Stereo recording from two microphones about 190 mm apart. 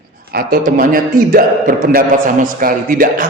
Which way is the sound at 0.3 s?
50° right (ahead or behind).